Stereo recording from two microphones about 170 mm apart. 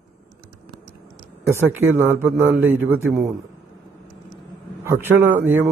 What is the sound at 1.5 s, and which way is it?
A man's voice, 15° right (ahead or behind).